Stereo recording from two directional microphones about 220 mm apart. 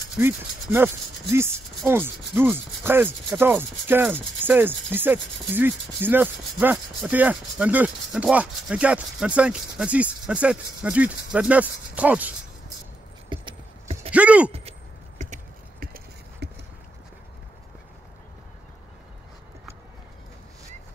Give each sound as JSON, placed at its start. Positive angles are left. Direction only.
{"t": 0.2, "sound": "rub", "side_deg": -10}
{"t": 13.3, "sound": "clip-clop", "side_deg": -25}
{"t": 14.1, "sound": "speech", "side_deg": -5}
{"t": 14.5, "sound": "a sound", "side_deg": -25}